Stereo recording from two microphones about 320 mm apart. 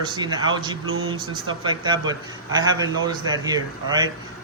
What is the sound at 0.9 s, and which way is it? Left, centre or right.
Speech, right.